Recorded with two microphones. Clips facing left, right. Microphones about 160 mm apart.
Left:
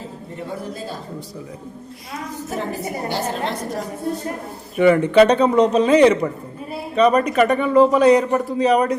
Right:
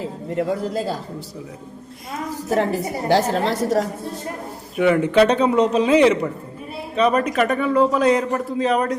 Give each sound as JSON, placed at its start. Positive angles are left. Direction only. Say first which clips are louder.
{"t": 0.3, "sound": "a man's voice", "louder": "right 8 dB", "side_deg": -90}
{"t": 3.1, "sound": "a man's voice", "louder": "right 8 dB", "side_deg": -90}
{"t": 4.8, "sound": "a man's voice", "louder": "left 3 dB", "side_deg": -5}